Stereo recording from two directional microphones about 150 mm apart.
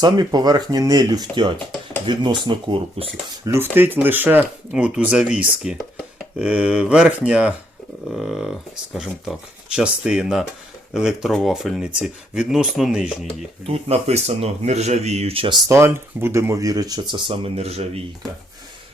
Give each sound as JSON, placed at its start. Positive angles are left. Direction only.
{"t": 0.0, "sound": "speech", "side_deg": -25}
{"t": 3.4, "sound": "speech", "side_deg": -15}
{"t": 13.7, "sound": "speech", "side_deg": -40}
{"t": 15.6, "sound": "speech", "side_deg": -20}